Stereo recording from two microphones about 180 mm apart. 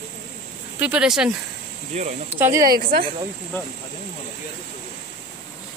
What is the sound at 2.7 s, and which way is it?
Speech, 55° right (ahead or behind).